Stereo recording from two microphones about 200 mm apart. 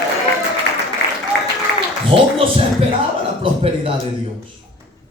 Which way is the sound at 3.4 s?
30° right (ahead or behind).